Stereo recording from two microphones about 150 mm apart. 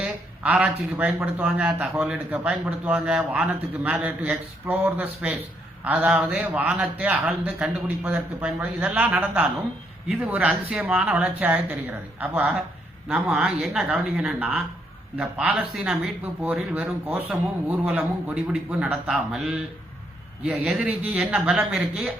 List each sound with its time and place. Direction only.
0.0 s a man's voice: 5° right (ahead or behind)
12.4 s a man's voice: centre (ahead or behind)
20.7 s speech: 5° right (ahead or behind)